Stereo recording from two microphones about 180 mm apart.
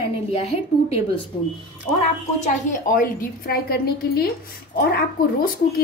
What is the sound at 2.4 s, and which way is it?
A woman's voice, 45° left (ahead or behind).